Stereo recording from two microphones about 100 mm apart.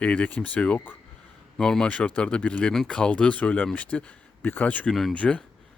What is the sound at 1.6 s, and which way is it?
Speech, 5° left (ahead or behind).